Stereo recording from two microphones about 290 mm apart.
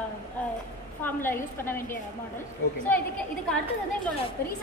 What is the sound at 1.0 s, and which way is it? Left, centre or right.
Speech, centre.